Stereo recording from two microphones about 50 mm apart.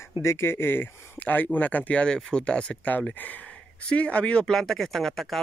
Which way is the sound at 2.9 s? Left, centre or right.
Left.